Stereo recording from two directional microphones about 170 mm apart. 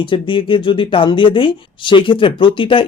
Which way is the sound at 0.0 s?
30° left (ahead or behind).